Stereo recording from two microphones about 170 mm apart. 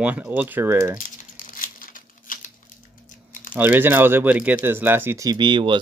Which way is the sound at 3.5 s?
10° right (ahead or behind).